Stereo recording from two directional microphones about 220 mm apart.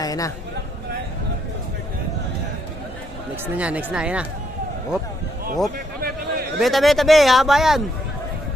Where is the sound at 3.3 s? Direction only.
10° right (ahead or behind).